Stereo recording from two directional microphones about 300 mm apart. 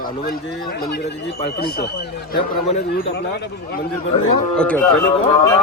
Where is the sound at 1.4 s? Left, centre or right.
Left.